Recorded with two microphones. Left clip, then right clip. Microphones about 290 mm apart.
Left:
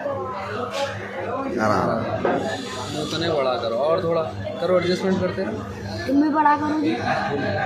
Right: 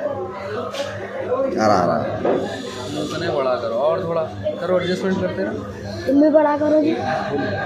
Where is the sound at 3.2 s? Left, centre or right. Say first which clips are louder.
Right 1 dB; centre.